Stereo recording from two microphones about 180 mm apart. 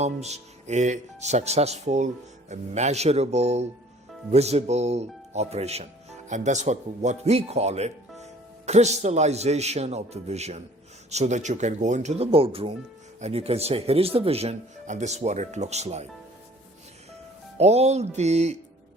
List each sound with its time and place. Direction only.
0.0 s a man's voice: 35° right (ahead or behind)
17.6 s speech: 35° right (ahead or behind)